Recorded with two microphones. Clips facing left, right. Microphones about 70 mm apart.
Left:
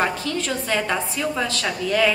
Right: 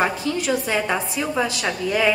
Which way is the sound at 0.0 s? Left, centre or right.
Centre.